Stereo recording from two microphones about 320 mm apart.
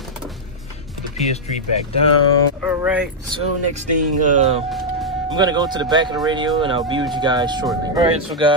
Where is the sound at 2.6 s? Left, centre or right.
Centre.